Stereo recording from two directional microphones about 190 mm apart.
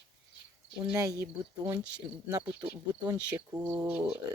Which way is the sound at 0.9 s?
15° right (ahead or behind).